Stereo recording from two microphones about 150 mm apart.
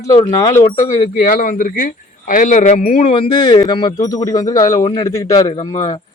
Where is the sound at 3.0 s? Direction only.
35° left (ahead or behind).